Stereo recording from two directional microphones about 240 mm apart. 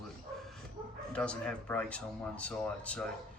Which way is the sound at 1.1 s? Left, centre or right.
Centre.